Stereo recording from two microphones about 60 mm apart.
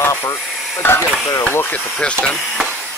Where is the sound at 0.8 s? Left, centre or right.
Left.